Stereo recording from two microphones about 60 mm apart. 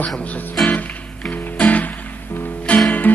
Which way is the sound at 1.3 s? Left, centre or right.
Left.